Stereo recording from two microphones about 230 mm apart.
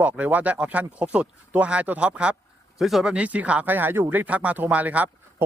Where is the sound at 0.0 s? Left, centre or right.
Centre.